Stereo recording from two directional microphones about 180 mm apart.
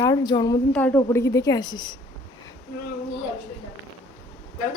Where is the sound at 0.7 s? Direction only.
10° left (ahead or behind).